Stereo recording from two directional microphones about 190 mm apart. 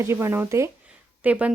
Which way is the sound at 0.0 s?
15° right (ahead or behind).